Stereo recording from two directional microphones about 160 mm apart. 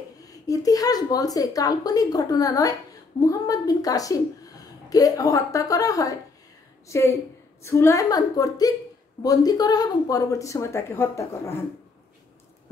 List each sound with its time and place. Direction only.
0.2 s a woman's voice: 20° left (ahead or behind)